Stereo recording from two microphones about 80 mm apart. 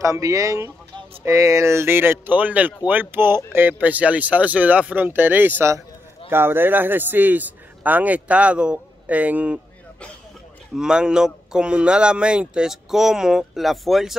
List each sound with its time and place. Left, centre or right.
0.0 s a man's voice: right; by 9.6 s centre
10.8 s a man's voice: centre